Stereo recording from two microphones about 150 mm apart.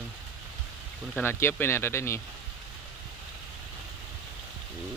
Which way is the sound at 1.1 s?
15° left (ahead or behind).